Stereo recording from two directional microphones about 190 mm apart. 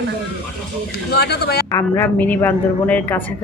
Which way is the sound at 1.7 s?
10° left (ahead or behind).